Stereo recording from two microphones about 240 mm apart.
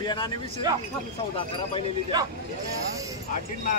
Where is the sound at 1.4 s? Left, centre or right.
Left.